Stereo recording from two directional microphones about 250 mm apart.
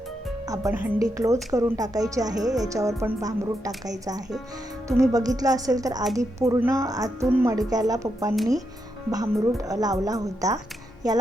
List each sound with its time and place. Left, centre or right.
0.4 s a woman's voice: centre
4.9 s a woman's voice: centre